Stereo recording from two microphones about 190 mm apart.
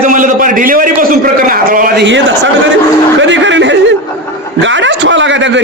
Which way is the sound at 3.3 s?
75° right (ahead or behind).